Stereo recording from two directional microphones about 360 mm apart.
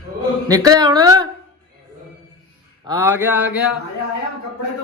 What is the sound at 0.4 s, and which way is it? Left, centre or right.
Speech, centre.